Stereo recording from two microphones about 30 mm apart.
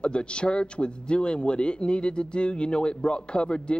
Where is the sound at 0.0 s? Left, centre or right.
Left.